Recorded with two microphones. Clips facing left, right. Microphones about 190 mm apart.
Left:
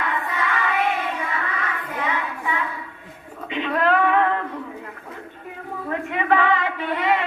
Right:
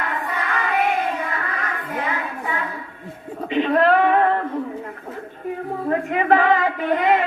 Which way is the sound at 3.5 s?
40° right (ahead or behind).